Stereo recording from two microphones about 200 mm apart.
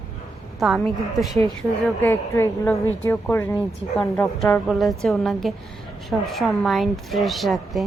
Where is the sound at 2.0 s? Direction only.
10° left (ahead or behind).